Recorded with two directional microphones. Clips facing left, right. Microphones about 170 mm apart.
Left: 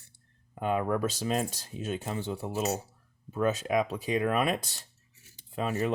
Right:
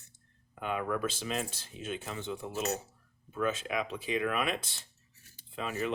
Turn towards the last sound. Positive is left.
turn(degrees=40)  # may be behind; listen again after turning